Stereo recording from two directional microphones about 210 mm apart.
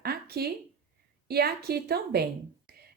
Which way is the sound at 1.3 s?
50° right (ahead or behind).